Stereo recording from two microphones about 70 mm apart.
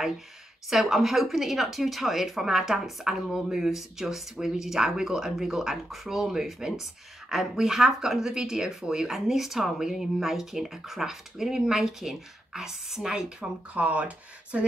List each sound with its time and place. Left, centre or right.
0.7 s speech: centre; by 14.7 s right